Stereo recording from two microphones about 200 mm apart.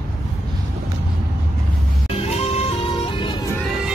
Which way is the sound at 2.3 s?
30° left (ahead or behind).